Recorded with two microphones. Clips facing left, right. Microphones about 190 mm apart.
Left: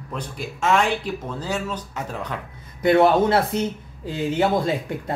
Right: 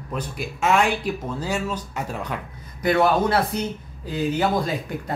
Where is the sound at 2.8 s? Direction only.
25° left (ahead or behind).